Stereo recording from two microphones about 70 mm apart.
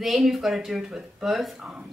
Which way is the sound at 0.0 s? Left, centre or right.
Centre.